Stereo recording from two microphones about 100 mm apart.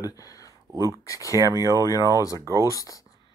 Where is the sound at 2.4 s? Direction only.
35° right (ahead or behind).